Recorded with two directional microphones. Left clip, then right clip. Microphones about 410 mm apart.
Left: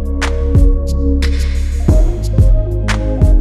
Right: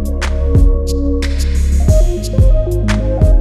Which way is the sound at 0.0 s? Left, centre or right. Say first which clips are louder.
Left 2 dB; centre.